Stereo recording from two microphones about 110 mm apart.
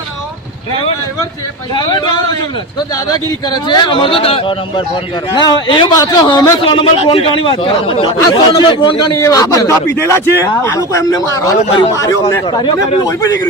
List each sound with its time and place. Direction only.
1.7 s a man's voice: 45° left (ahead or behind)
6.7 s speech: 55° left (ahead or behind)
9.1 s a man's voice: 30° left (ahead or behind)
12.5 s speech: 45° left (ahead or behind)